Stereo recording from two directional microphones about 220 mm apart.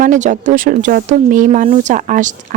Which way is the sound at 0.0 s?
35° right (ahead or behind).